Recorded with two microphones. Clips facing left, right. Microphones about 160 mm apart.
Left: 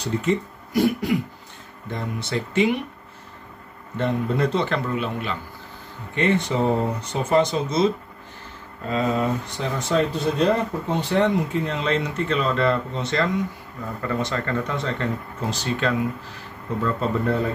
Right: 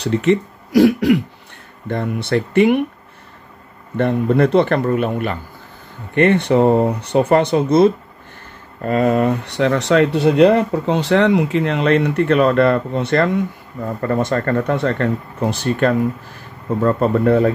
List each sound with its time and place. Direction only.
0.0 s speech: 75° right (ahead or behind)
1.9 s speech: 60° right (ahead or behind)
3.9 s speech: 60° right (ahead or behind)